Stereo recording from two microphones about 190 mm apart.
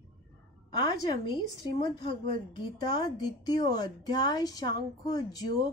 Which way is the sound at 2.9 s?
20° left (ahead or behind).